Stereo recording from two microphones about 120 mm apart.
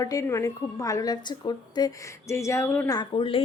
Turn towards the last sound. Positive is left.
turn(degrees=35)  # may be behind; listen again after turning